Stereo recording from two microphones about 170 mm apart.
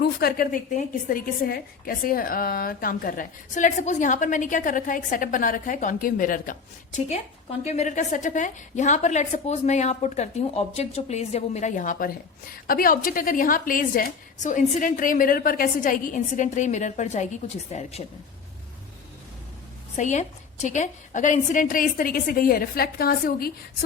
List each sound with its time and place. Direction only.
0.0 s a woman's voice: 65° left (ahead or behind); by 18.0 s 40° left (ahead or behind)
20.0 s a woman's voice: 45° left (ahead or behind); by 23.5 s 60° left (ahead or behind)